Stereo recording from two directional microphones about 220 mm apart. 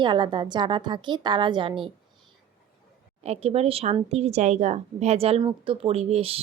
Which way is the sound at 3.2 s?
30° right (ahead or behind).